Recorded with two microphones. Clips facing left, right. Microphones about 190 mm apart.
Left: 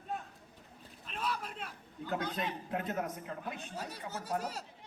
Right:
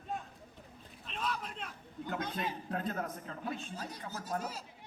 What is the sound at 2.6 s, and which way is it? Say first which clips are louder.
A man's voice: left 1 dB; 20° left (ahead or behind).